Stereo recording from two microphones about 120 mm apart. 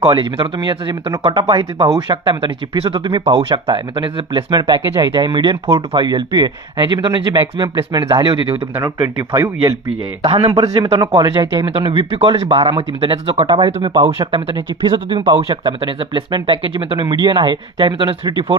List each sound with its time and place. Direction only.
0.0 s speech: 50° right (ahead or behind)
9.0 s speech: 30° right (ahead or behind)
10.2 s speech: 50° right (ahead or behind)
11.0 s speech: 40° right (ahead or behind)
13.7 s speech: 60° right (ahead or behind)
13.9 s speech: 40° right (ahead or behind)